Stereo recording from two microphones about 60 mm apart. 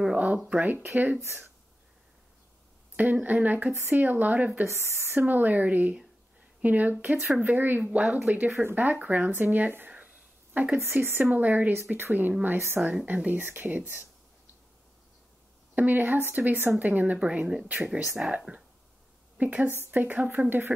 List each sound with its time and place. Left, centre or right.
0.5 s speech: right
3.0 s speech: right
4.6 s speech: right; by 8.5 s centre
8.7 s speech: right
15.7 s speech: right
18.2 s speech: centre
19.3 s speech: right